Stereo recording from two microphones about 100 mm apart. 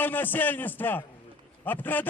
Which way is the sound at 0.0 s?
20° left (ahead or behind).